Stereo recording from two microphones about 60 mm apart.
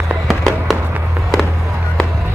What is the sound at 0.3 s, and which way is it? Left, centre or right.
Fireworks, centre.